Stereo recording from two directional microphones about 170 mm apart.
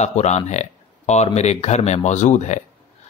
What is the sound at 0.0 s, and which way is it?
Speech, 40° left (ahead or behind).